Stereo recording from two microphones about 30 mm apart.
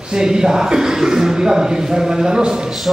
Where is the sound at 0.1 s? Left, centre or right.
Right.